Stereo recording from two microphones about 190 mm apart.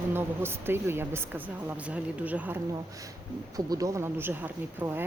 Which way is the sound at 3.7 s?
20° right (ahead or behind).